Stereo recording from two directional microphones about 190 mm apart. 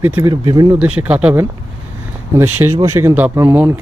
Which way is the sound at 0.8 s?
10° right (ahead or behind).